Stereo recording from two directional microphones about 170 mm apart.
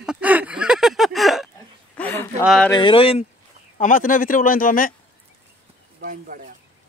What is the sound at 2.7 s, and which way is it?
Speech, 30° left (ahead or behind).